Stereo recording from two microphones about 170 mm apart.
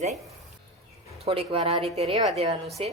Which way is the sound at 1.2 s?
35° right (ahead or behind).